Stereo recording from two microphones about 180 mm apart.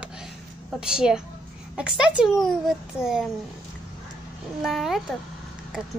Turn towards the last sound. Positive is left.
turn(degrees=0)  # may be behind; listen again after turning